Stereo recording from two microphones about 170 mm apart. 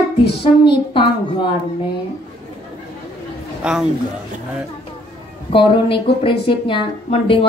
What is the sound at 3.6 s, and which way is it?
Speech, 5° right (ahead or behind).